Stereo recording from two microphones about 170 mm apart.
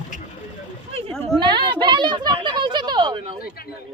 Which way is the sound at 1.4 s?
25° right (ahead or behind).